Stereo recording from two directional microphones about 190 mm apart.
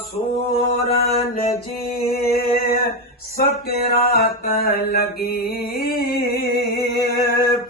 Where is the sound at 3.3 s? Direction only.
50° left (ahead or behind).